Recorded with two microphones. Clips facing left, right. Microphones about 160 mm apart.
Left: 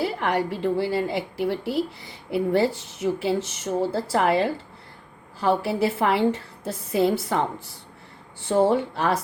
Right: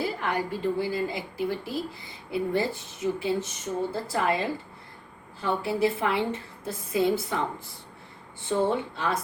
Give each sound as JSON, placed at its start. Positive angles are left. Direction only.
{"t": 0.0, "sound": "a woman's voice", "side_deg": 75}